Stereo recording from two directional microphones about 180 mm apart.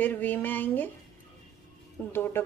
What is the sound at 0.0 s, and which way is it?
Speech, 10° left (ahead or behind).